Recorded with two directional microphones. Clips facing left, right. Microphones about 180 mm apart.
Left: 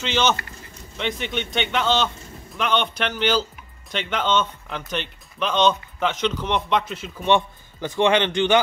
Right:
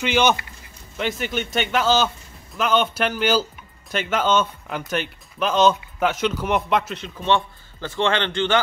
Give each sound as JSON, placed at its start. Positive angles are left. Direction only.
{"t": 0.0, "sound": "speech", "side_deg": -10}
{"t": 7.2, "sound": "a man's voice", "side_deg": 15}